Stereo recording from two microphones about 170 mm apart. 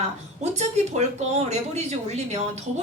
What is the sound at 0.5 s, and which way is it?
A woman's voice, 40° right (ahead or behind).